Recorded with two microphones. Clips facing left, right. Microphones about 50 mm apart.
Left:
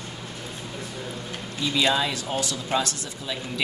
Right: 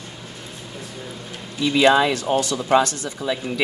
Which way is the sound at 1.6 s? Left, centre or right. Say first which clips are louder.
Right 8 dB; right.